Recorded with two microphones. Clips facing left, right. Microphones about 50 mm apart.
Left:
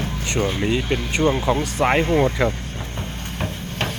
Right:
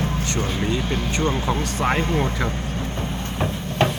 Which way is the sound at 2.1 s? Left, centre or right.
Centre.